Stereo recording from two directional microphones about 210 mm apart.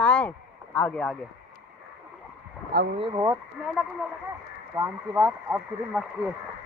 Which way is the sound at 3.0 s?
15° right (ahead or behind).